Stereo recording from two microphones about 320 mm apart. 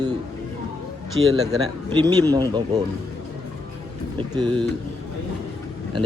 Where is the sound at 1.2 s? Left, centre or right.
Centre.